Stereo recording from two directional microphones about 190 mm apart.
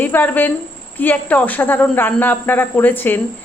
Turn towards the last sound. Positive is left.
turn(degrees=10)  # may be behind; listen again after turning